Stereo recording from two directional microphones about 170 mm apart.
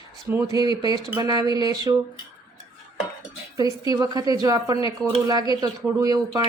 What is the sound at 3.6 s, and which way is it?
A woman's voice, 20° right (ahead or behind).